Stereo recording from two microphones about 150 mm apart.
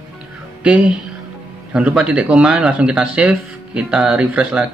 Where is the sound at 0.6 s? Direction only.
5° right (ahead or behind).